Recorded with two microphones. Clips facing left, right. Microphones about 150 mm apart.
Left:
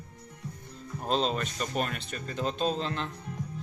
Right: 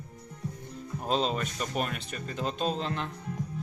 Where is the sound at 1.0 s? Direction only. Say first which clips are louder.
Even; 5° right (ahead or behind).